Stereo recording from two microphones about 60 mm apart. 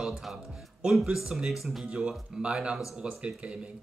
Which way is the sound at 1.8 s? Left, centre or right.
Centre.